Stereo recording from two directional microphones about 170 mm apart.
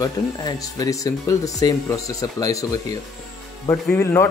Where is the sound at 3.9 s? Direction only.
15° left (ahead or behind).